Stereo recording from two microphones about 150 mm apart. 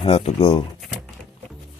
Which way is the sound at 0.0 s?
40° left (ahead or behind).